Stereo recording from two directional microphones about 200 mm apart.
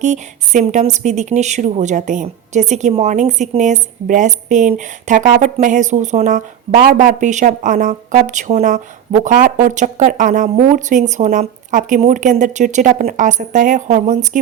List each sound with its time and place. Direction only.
0.0 s speech: 35° right (ahead or behind)